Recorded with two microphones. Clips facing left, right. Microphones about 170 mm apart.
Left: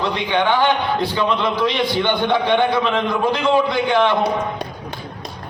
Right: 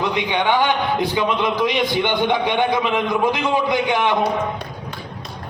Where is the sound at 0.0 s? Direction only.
15° right (ahead or behind).